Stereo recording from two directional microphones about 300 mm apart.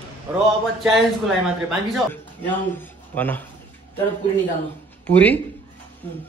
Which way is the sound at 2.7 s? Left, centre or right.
Centre.